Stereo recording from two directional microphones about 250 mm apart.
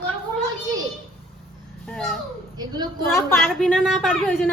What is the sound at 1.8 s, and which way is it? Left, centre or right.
A woman's voice, centre.